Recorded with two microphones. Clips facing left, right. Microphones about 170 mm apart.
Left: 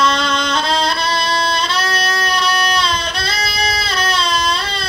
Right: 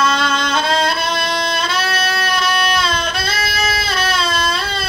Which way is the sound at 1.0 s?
50° right (ahead or behind).